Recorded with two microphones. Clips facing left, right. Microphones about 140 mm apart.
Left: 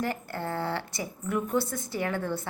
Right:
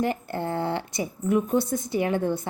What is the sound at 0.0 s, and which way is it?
Speech, 20° right (ahead or behind).